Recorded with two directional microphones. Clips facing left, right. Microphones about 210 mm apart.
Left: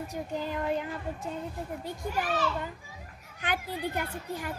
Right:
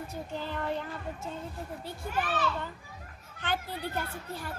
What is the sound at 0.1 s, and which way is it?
A child's voice, 10° left (ahead or behind).